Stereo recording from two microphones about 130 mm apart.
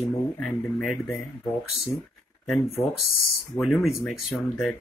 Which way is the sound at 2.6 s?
55° left (ahead or behind).